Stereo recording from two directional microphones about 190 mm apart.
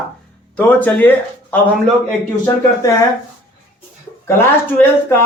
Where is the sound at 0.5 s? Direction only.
10° left (ahead or behind).